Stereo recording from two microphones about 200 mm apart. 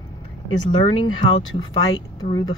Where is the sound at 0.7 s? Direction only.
25° left (ahead or behind).